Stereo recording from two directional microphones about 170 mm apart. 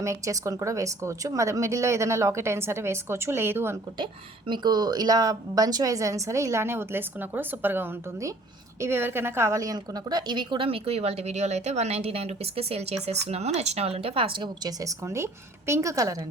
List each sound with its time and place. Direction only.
0.0 s a woman's voice: 20° right (ahead or behind)
3.9 s a woman's voice: 30° right (ahead or behind)